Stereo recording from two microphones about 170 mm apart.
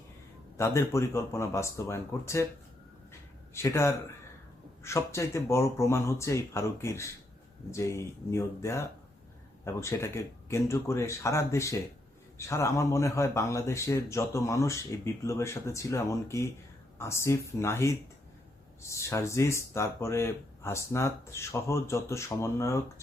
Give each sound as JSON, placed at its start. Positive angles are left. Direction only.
{"t": 0.5, "sound": "speech", "side_deg": 15}
{"t": 3.1, "sound": "a sound", "side_deg": 15}
{"t": 4.8, "sound": "speech", "side_deg": 15}